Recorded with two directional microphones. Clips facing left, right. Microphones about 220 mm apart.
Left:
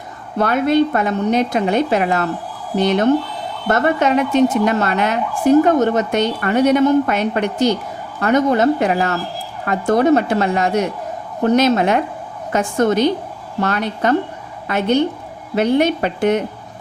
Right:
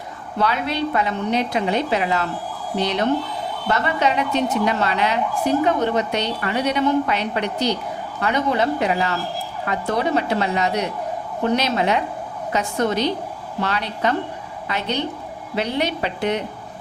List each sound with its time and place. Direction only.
0.3 s a woman's voice: 50° left (ahead or behind)